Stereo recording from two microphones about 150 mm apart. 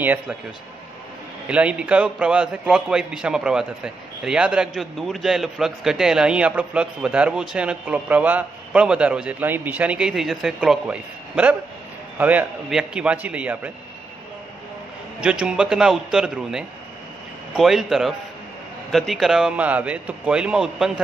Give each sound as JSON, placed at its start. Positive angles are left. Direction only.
{"t": 0.0, "sound": "a man's voice", "side_deg": -10}
{"t": 1.5, "sound": "a man's voice", "side_deg": -10}
{"t": 15.1, "sound": "a man's voice", "side_deg": -5}